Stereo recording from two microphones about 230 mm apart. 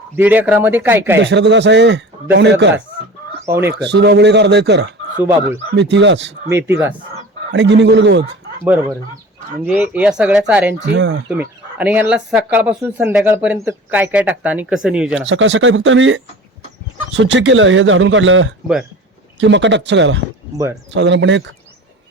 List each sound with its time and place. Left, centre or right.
0.2 s speech: centre
1.2 s a man's voice: right
3.4 s speech: centre
3.7 s a man's voice: right
5.1 s speech: centre
5.7 s a man's voice: right
6.5 s speech: centre
7.5 s a man's voice: right
9.6 s speech: centre
10.8 s a man's voice: right
11.3 s speech: centre
15.3 s a man's voice: right